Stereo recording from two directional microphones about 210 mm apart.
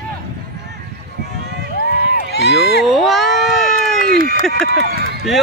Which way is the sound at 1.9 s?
45° right (ahead or behind).